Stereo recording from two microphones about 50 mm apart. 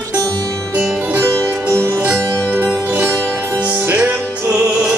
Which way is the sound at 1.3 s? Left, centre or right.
Right.